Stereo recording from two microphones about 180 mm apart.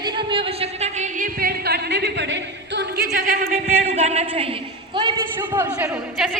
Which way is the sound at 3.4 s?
40° right (ahead or behind).